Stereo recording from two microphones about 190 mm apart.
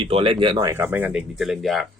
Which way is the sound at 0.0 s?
30° right (ahead or behind).